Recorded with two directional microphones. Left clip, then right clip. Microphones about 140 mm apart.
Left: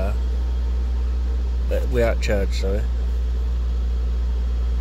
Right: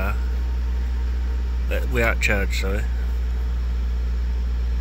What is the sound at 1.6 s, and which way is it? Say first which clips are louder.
Speech: left 1 dB; 20° left (ahead or behind).